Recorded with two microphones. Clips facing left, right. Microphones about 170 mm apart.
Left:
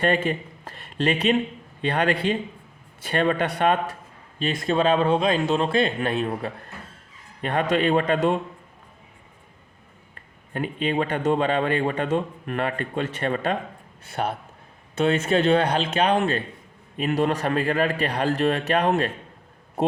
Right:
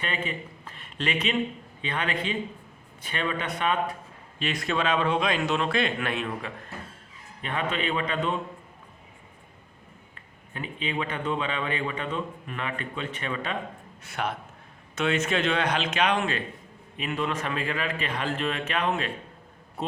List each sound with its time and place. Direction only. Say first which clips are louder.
0.3 s a sound: left 8 dB; 40° left (ahead or behind)
1.9 s speech: left 7 dB; 40° left (ahead or behind)
3.3 s speech: left 6 dB; 70° left (ahead or behind)
4.4 s speech: left 5 dB; 30° left (ahead or behind)
10.5 s speech: left 7 dB; 45° left (ahead or behind)
14.1 s speech: left 4 dB; 30° left (ahead or behind)